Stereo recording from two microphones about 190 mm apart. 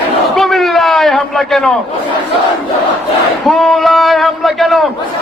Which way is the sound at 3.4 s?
Centre (ahead or behind).